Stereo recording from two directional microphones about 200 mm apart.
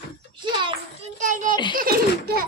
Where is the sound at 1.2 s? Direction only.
40° right (ahead or behind).